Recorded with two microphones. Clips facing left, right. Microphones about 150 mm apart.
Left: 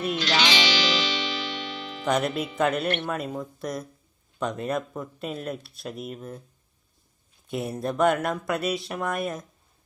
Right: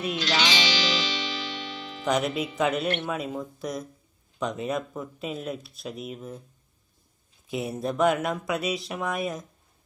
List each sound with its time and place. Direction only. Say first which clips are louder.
0.2 s music: left 1 dB; 65° left (ahead or behind)
2.0 s speech: left 1 dB; centre (ahead or behind)
7.4 s speech: even; centre (ahead or behind)